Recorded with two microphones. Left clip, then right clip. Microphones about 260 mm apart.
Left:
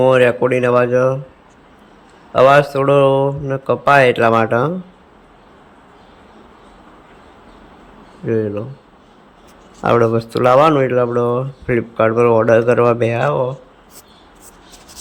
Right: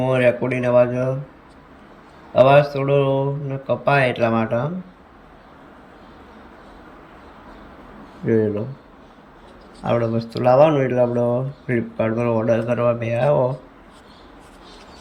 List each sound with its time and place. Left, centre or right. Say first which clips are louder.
0.0 s speech: left 6 dB; centre
2.3 s speech: left 3 dB; centre
8.3 s speech: left 1 dB; centre
9.9 s speech: left 7 dB; centre